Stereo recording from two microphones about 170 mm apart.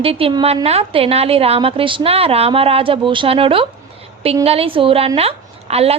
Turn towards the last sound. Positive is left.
turn(degrees=-35)  # may be behind; listen again after turning